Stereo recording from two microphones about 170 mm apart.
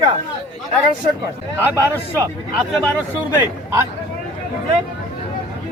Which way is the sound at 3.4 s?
15° right (ahead or behind).